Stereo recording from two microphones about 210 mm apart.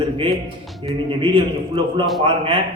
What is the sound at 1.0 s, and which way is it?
A man's voice, 25° right (ahead or behind).